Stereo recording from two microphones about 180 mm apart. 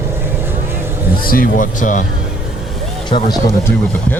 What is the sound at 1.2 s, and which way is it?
Speech, 50° left (ahead or behind).